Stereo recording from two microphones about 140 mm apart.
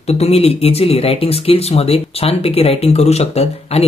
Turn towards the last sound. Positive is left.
turn(degrees=50)  # may be behind; listen again after turning